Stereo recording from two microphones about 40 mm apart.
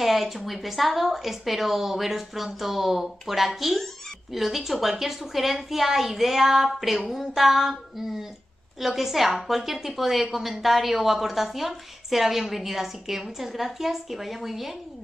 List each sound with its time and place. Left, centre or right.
0.0 s a woman's voice: centre